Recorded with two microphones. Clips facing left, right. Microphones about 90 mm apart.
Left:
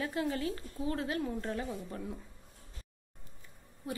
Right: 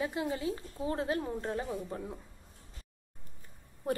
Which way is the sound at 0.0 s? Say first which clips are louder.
Even; 20° right (ahead or behind).